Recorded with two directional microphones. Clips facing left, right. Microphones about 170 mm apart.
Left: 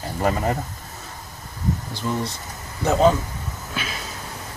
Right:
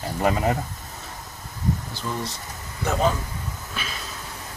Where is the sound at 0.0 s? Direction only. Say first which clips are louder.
Even; 5° right (ahead or behind).